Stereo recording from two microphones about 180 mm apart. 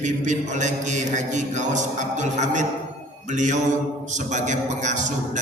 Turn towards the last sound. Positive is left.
turn(degrees=-45)  # may be behind; listen again after turning